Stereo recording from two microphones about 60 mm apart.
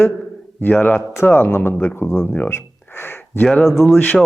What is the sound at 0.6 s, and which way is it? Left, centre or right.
Speech, left.